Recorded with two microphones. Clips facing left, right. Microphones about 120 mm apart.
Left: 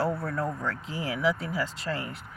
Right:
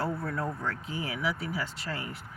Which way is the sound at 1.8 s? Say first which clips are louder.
Left 4 dB; 30° left (ahead or behind).